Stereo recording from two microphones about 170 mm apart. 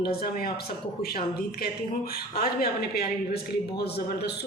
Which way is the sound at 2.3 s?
65° left (ahead or behind).